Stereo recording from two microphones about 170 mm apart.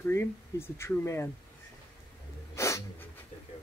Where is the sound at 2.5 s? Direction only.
15° left (ahead or behind).